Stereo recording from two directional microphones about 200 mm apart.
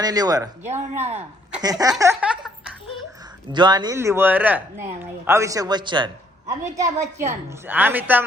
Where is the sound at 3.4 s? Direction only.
20° right (ahead or behind).